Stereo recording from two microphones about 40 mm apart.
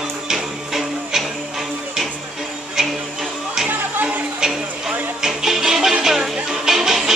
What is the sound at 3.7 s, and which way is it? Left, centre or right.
Music, right.